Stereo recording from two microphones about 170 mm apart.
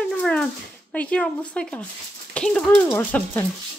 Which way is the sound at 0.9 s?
5° left (ahead or behind).